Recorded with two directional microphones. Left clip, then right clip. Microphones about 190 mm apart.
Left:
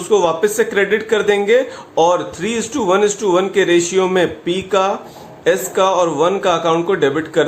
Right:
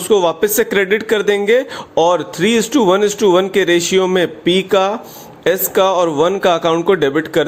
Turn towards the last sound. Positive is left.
turn(degrees=-40)  # may be behind; listen again after turning